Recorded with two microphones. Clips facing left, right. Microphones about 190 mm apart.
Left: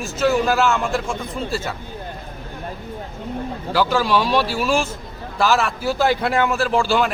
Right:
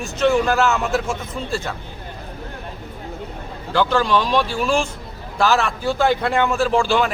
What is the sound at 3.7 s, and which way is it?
A man's voice, 5° left (ahead or behind).